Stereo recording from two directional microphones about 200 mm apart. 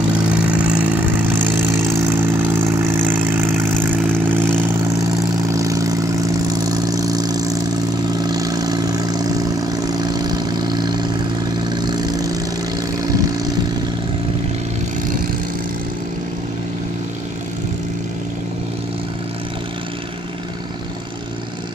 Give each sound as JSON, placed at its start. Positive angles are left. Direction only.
{"t": 0.5, "sound": "vehicle", "side_deg": -5}